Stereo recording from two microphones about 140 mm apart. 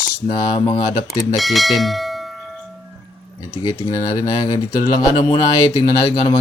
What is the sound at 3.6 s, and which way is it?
Speech, 30° left (ahead or behind).